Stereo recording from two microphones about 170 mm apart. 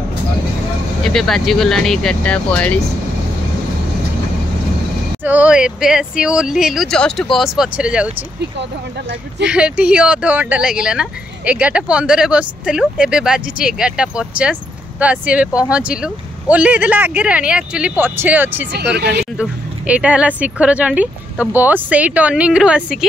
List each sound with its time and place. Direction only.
1.0 s speech: centre (ahead or behind)
5.2 s speech: 10° right (ahead or behind)
9.5 s speech: 5° right (ahead or behind)
18.7 s speech: 75° right (ahead or behind)
19.9 s speech: 5° right (ahead or behind)